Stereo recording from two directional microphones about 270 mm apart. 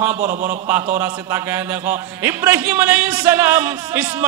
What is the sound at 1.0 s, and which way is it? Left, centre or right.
Speech, centre.